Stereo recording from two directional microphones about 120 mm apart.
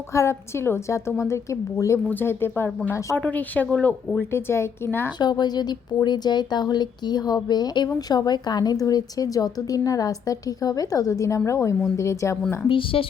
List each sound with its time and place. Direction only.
0.1 s a woman's voice: 25° left (ahead or behind)
5.2 s a woman's voice: 35° left (ahead or behind)
12.6 s a woman's voice: 50° left (ahead or behind)